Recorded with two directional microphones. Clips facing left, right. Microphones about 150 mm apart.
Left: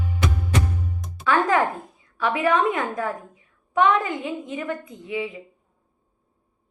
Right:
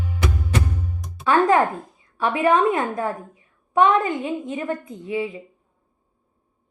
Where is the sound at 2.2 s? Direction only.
30° right (ahead or behind).